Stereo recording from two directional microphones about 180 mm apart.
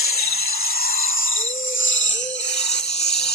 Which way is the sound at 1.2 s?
90° left.